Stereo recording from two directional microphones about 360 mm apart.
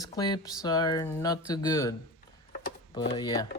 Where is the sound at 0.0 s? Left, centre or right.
Centre.